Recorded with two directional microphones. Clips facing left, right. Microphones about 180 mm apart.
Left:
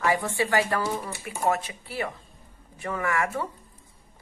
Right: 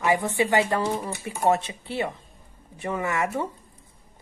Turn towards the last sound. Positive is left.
turn(degrees=-20)  # may be behind; listen again after turning